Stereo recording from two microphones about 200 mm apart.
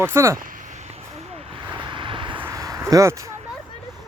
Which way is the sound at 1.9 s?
25° right (ahead or behind).